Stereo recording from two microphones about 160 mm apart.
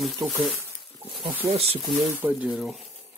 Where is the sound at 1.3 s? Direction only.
15° right (ahead or behind).